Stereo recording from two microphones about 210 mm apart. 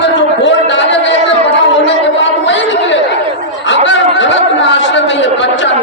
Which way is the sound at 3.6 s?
60° left (ahead or behind).